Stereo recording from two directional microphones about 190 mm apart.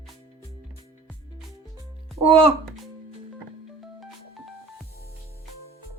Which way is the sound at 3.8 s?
Centre (ahead or behind).